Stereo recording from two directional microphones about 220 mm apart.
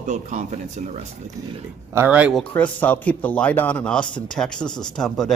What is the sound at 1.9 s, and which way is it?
Speech, 5° right (ahead or behind).